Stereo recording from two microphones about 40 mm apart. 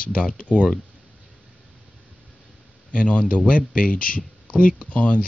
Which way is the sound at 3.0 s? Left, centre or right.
Left.